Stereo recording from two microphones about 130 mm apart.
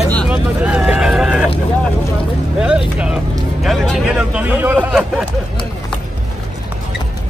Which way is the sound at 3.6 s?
Centre (ahead or behind).